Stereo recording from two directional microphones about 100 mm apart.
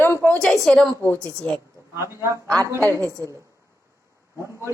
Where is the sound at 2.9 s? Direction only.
30° right (ahead or behind).